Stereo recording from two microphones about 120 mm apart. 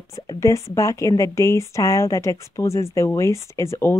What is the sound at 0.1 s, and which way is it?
Speech, 25° left (ahead or behind).